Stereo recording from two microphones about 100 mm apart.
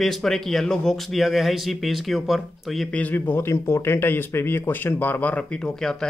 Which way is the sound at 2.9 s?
15° left (ahead or behind).